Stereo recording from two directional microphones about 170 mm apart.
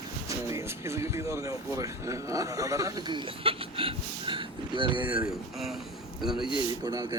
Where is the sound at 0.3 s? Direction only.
15° right (ahead or behind).